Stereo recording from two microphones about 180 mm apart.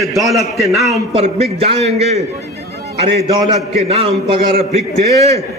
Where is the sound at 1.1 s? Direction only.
35° right (ahead or behind).